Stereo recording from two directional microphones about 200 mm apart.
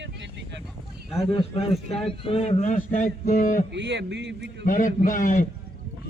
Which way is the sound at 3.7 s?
60° right (ahead or behind).